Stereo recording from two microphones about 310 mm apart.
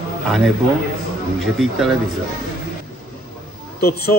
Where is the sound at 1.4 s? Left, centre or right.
Centre.